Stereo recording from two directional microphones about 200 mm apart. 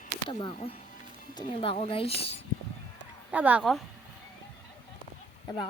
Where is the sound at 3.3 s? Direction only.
10° right (ahead or behind).